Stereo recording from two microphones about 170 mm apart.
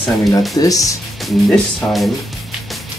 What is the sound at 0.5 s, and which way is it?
Speech, 20° left (ahead or behind).